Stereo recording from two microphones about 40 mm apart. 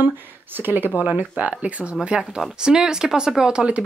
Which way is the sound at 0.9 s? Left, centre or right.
Right.